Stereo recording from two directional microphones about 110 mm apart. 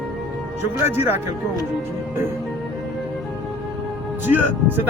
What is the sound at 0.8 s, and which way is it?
Speech, 20° right (ahead or behind).